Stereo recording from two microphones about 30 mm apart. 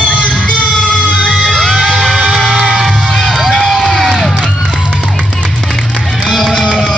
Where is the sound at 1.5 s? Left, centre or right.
Centre.